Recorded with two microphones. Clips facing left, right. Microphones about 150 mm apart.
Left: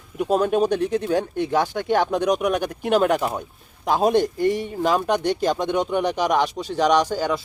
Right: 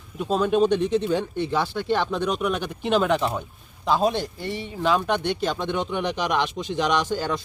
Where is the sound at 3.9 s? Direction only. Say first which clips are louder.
Left 4 dB; 50° left (ahead or behind).